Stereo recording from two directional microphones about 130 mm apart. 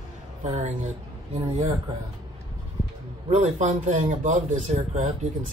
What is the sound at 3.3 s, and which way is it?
Speech, 65° right (ahead or behind).